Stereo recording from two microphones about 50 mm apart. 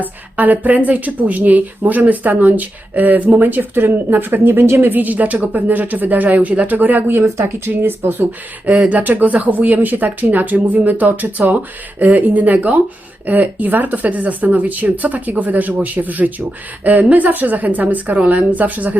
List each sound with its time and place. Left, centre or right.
0.0 s speech: right
7.3 s speech: right
7.7 s speech: right
8.9 s speech: right